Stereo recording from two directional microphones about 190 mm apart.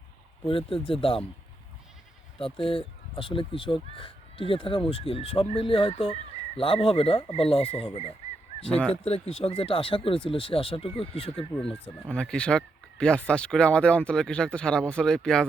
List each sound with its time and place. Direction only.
0.4 s speech: 30° left (ahead or behind)
2.4 s speech: 30° left (ahead or behind)
8.7 s speech: 5° left (ahead or behind)
9.0 s speech: 30° left (ahead or behind)
11.5 s speech: 5° left (ahead or behind)